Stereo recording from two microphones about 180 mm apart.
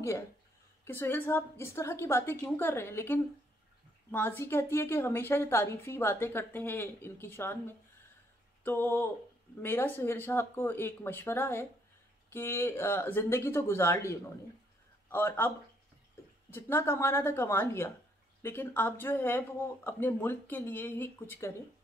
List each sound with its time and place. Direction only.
0.8 s a woman's voice: 10° left (ahead or behind)